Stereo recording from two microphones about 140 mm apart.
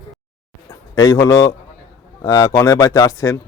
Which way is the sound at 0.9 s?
25° left (ahead or behind).